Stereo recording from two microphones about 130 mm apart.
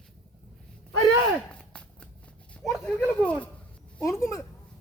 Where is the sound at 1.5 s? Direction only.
10° left (ahead or behind).